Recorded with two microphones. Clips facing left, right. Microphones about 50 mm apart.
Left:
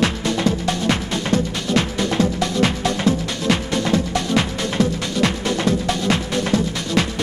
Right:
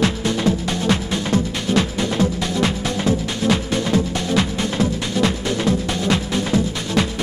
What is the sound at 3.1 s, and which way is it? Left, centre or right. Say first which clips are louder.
Music: right 2 dB; left.